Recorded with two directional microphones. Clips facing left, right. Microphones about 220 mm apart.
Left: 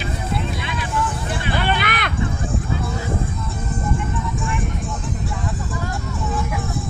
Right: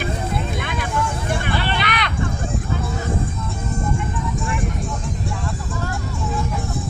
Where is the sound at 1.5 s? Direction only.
50° left (ahead or behind).